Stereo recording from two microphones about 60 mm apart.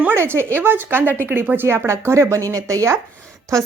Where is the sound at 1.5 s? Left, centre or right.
Right.